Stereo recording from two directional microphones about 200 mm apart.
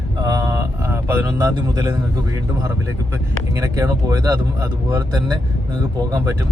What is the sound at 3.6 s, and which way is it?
Speech, 15° right (ahead or behind).